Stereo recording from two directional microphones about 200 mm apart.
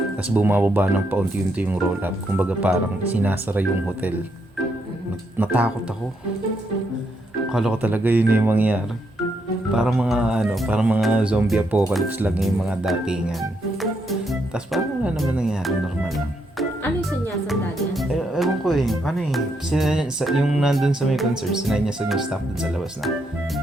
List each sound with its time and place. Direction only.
0.2 s speech: 10° right (ahead or behind)
5.4 s speech: 10° right (ahead or behind)
7.5 s speech: 5° right (ahead or behind)